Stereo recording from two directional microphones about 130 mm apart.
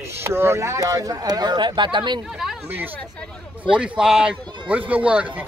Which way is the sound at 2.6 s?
15° right (ahead or behind).